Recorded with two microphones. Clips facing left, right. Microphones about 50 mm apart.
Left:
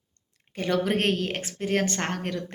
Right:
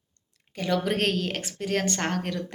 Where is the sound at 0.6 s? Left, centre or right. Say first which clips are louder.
Left 1 dB; left.